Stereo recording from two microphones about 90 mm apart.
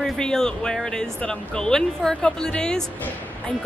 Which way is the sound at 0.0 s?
5° left (ahead or behind).